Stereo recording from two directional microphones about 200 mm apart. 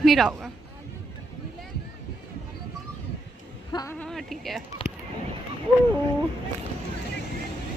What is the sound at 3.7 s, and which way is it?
Speech, 20° left (ahead or behind).